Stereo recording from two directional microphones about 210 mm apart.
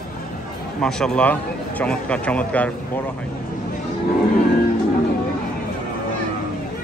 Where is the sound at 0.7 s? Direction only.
5° left (ahead or behind).